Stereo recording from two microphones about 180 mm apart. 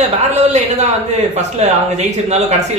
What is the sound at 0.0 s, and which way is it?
A man's voice, 40° right (ahead or behind).